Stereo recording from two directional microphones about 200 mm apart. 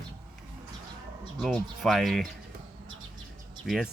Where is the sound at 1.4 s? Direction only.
Centre (ahead or behind).